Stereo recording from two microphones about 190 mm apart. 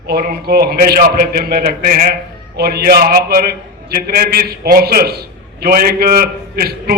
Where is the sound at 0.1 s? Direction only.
55° right (ahead or behind).